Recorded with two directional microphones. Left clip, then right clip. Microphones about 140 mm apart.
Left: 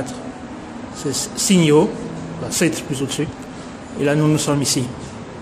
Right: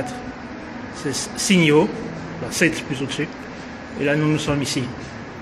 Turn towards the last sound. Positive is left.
turn(degrees=20)  # may be behind; listen again after turning